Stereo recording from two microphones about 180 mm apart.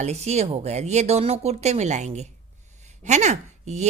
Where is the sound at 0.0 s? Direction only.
35° right (ahead or behind).